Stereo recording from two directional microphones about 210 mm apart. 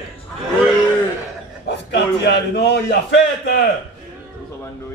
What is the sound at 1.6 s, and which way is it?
A man's voice, 55° left (ahead or behind).